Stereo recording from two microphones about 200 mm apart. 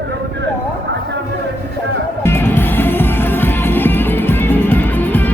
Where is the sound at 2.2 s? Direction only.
10° left (ahead or behind).